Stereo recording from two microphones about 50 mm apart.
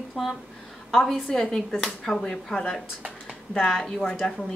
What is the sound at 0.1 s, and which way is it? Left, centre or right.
A woman's voice, centre.